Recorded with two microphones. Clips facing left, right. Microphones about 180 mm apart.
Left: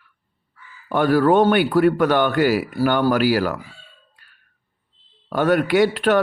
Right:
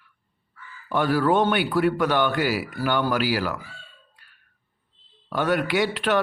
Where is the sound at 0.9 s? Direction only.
50° left (ahead or behind).